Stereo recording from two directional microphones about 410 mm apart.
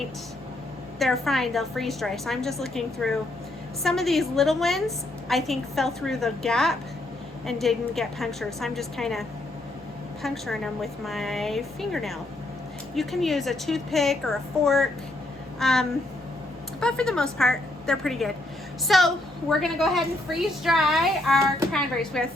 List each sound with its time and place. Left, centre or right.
0.9 s a woman's voice: centre
10.2 s a woman's voice: centre